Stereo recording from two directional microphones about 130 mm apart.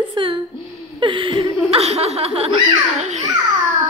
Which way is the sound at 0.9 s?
40° right (ahead or behind).